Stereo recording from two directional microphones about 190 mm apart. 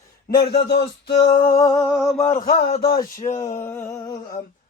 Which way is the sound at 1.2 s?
20° left (ahead or behind).